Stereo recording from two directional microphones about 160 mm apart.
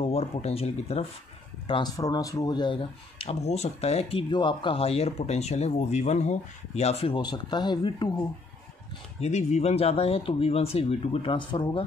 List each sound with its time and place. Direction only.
0.0 s speech: 40° left (ahead or behind)
1.7 s speech: 25° left (ahead or behind)
9.2 s speech: 45° left (ahead or behind)